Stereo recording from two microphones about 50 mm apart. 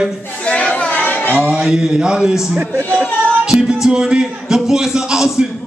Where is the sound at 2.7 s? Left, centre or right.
Right.